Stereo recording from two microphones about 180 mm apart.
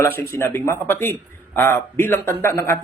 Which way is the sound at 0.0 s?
10° left (ahead or behind).